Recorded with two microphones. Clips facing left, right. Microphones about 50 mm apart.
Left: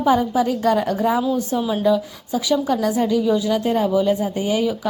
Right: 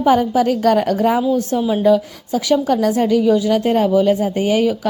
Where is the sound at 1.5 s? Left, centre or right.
Right.